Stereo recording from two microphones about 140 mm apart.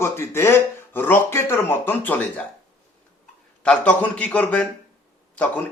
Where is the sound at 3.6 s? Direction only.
10° left (ahead or behind).